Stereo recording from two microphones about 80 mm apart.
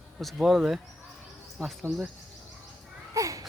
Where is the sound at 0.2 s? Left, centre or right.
Centre.